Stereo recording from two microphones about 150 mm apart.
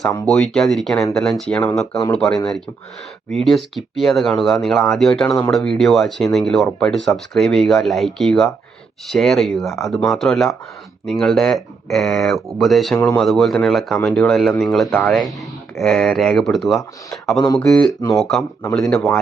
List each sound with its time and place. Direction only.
0.3 s speech: centre (ahead or behind)
9.6 s speech: 20° left (ahead or behind)
10.1 s speech: centre (ahead or behind)
17.4 s speech: 20° left (ahead or behind)
17.7 s speech: centre (ahead or behind)